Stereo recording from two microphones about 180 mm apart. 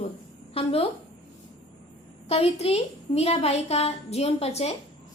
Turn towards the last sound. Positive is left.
turn(degrees=35)  # may be behind; listen again after turning